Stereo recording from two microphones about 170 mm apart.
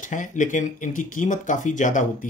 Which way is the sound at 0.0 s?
50° left (ahead or behind).